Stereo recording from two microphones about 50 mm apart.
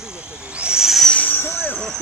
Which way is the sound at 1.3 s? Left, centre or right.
Left.